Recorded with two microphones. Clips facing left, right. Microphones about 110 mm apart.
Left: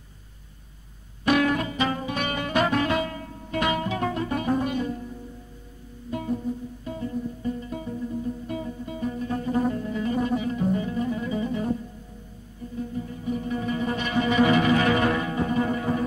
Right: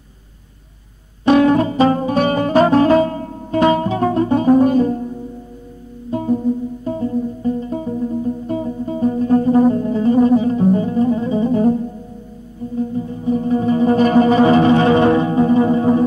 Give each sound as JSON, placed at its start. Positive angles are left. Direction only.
{"t": 1.2, "sound": "music", "side_deg": -30}
{"t": 12.7, "sound": "music", "side_deg": -30}